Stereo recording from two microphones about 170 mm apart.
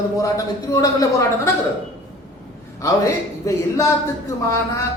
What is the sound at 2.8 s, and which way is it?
A man's voice, 20° left (ahead or behind).